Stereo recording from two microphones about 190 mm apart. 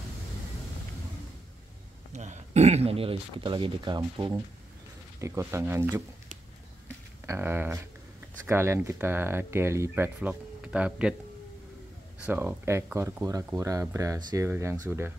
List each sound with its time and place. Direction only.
2.1 s speech: 40° right (ahead or behind); by 6.0 s 15° right (ahead or behind)
7.2 s speech: 10° right (ahead or behind)
12.3 s speech: 10° right (ahead or behind)